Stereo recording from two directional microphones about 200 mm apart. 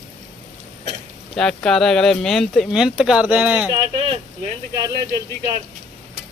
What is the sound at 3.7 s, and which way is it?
Speech, 30° right (ahead or behind).